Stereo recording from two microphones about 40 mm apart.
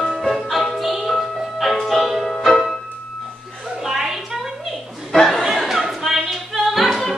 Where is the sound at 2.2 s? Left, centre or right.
Centre.